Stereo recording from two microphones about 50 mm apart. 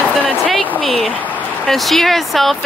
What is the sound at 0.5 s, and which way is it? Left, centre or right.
Speech, centre.